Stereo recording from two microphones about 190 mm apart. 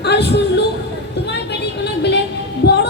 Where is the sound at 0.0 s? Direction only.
60° left (ahead or behind).